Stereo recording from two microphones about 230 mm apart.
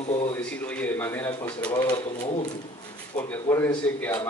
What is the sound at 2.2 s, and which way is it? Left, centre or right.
Speech, left.